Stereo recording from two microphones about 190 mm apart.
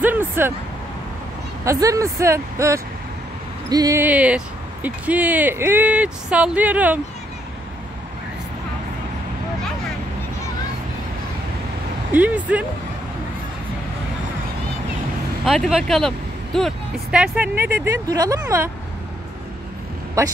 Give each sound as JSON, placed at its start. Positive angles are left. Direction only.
{"t": 0.0, "sound": "vehicle", "side_deg": -10}
{"t": 1.6, "sound": "speech", "side_deg": -15}
{"t": 12.1, "sound": "speech", "side_deg": -10}
{"t": 15.4, "sound": "speech", "side_deg": 0}